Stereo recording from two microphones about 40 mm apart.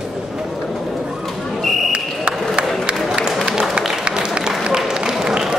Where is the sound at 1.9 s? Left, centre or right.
Right.